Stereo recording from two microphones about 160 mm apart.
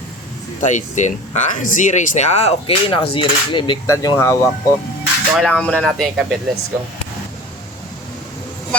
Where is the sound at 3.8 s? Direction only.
20° left (ahead or behind).